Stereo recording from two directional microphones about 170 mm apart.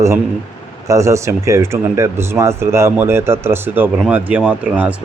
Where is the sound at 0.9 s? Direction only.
15° right (ahead or behind).